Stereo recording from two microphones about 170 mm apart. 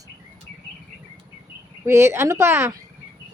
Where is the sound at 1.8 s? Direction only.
15° right (ahead or behind).